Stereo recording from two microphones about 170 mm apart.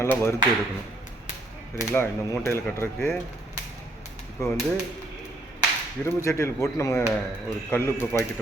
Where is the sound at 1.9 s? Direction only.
15° left (ahead or behind).